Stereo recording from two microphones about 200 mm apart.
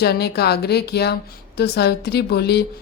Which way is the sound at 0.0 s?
55° left (ahead or behind).